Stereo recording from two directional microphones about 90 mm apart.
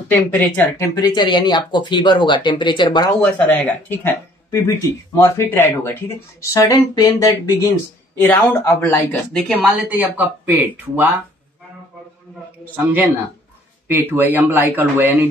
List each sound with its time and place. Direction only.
0.1 s speech: 20° left (ahead or behind)
0.7 s speech: 35° left (ahead or behind)
1.0 s speech: 55° left (ahead or behind)
3.2 s speech: 15° left (ahead or behind); by 7.3 s 40° left (ahead or behind)
8.6 s speech: 30° left (ahead or behind)
9.3 s speech: centre (ahead or behind)
9.8 s speech: 20° right (ahead or behind)
12.7 s speech: 20° right (ahead or behind)